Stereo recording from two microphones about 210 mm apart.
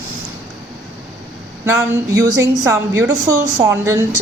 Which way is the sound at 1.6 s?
10° right (ahead or behind).